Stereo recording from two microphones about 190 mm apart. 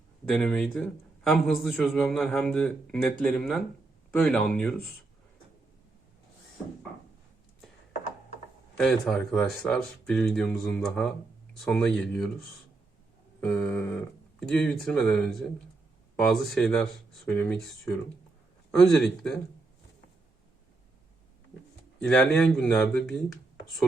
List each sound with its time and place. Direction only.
0.3 s a man's voice: 10° left (ahead or behind)
8.8 s a man's voice: 5° left (ahead or behind)
22.0 s a man's voice: 5° left (ahead or behind)